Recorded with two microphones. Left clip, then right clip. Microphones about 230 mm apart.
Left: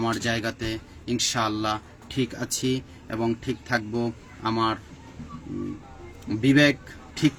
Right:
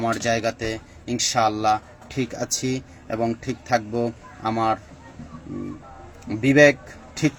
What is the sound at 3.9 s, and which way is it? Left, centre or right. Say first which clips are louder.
Speech: right 4 dB; centre.